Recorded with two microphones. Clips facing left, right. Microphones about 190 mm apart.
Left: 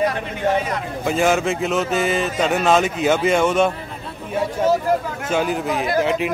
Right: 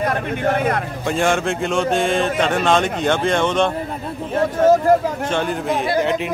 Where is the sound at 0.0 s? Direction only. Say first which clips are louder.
Right 1 dB; 55° right (ahead or behind).